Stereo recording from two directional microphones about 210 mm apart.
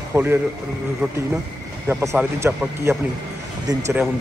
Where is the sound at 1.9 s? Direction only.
10° right (ahead or behind).